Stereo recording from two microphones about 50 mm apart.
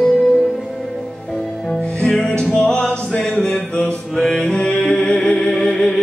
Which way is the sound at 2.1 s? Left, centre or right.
Centre.